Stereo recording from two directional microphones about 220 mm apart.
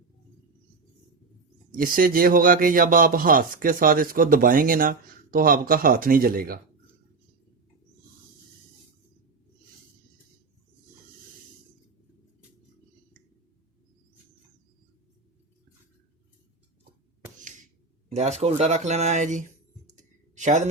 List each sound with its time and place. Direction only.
1.7 s speech: 40° right (ahead or behind)
18.1 s speech: 30° right (ahead or behind)
19.9 s a sound: 35° right (ahead or behind)